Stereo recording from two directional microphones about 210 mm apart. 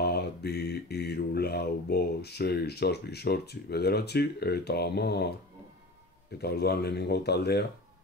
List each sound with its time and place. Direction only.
0.0 s mantra: 50° left (ahead or behind)
6.3 s speech: 50° left (ahead or behind)